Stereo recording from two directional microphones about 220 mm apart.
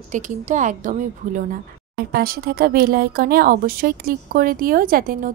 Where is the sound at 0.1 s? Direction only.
35° right (ahead or behind).